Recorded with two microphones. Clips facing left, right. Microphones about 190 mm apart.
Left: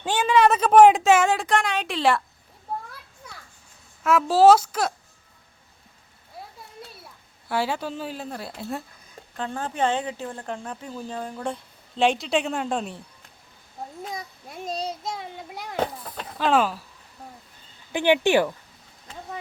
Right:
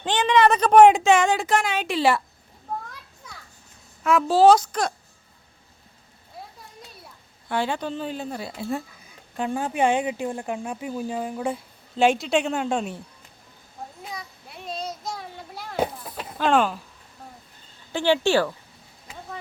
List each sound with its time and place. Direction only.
0.0 s speech: 10° left (ahead or behind)
2.7 s children playing: 10° left (ahead or behind)
4.0 s speech: 5° left (ahead or behind)
7.4 s speech: 5° left (ahead or behind)
9.3 s speech: 10° right (ahead or behind)
14.1 s child singing: 45° left (ahead or behind); by 15.7 s 15° left (ahead or behind)
15.7 s a sound: 10° right (ahead or behind)
16.5 s speech: 5° left (ahead or behind)
17.9 s speech: 15° left (ahead or behind)